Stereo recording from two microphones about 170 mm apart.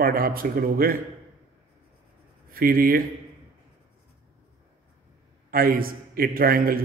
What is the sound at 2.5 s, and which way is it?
Speech, 60° right (ahead or behind).